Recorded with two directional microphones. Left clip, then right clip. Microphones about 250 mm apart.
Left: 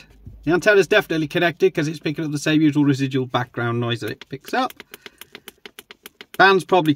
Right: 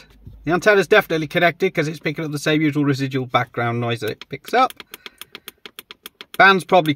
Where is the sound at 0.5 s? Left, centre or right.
Centre.